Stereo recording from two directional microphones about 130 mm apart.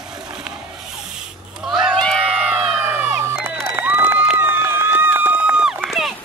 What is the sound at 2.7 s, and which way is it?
Crowd, 15° right (ahead or behind).